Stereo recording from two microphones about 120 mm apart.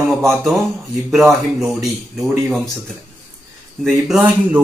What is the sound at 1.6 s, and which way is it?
Speech, centre (ahead or behind).